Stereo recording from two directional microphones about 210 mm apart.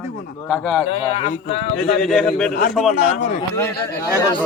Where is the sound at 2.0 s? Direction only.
5° left (ahead or behind).